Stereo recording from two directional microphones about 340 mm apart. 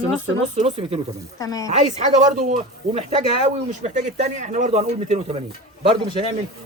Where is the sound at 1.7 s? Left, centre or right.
Centre.